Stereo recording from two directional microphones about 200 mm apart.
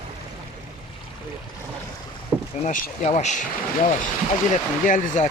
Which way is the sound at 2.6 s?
40° left (ahead or behind).